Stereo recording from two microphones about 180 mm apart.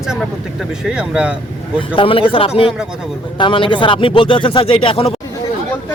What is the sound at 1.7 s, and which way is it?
Speech, 30° left (ahead or behind).